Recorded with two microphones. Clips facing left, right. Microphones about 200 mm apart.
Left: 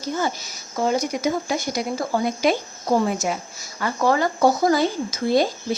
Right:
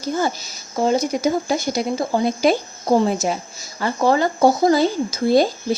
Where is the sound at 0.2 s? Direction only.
30° right (ahead or behind).